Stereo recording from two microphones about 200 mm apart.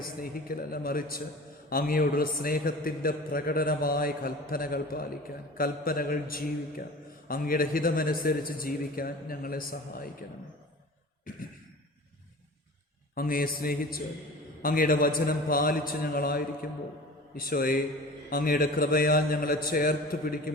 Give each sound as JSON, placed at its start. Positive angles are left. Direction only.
{"t": 0.2, "sound": "a man's voice", "side_deg": 45}
{"t": 11.3, "sound": "beatboxing", "side_deg": 45}
{"t": 13.1, "sound": "a man's voice", "side_deg": 45}